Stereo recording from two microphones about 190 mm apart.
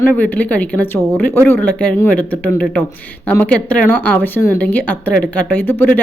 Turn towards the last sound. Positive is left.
turn(degrees=10)  # may be behind; listen again after turning